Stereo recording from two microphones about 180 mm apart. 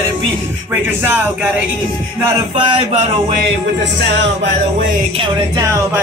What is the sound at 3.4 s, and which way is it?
Music, 75° right (ahead or behind).